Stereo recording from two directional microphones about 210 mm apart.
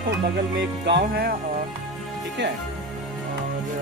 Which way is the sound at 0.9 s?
50° right (ahead or behind).